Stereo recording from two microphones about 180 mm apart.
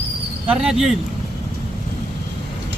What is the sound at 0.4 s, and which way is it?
Speech, 5° right (ahead or behind).